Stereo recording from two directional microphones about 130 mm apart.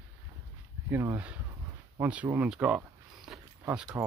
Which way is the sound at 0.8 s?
20° right (ahead or behind).